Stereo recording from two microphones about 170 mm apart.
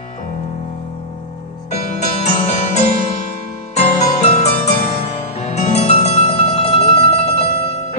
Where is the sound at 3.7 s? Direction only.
40° left (ahead or behind).